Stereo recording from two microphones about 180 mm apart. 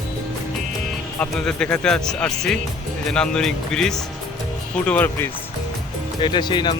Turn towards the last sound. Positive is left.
turn(degrees=25)  # may be behind; listen again after turning